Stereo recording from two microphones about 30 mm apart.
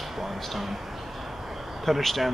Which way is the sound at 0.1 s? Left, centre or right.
Centre.